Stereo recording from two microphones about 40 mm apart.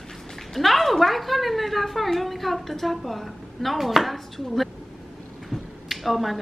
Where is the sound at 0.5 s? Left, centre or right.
Centre.